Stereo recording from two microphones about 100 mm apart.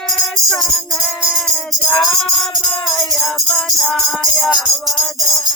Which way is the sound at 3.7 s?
30° left (ahead or behind).